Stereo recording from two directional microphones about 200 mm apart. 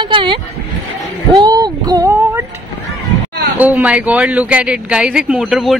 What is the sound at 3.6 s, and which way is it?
A woman's voice, 10° right (ahead or behind).